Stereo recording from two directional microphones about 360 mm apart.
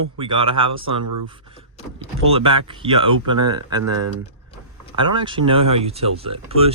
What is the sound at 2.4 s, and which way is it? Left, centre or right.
Speech, centre.